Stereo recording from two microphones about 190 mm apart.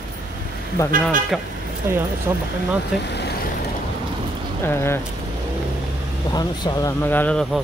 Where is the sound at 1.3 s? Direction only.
Centre (ahead or behind).